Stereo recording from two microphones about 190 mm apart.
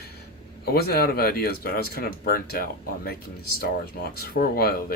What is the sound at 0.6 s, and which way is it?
Speech, 55° left (ahead or behind).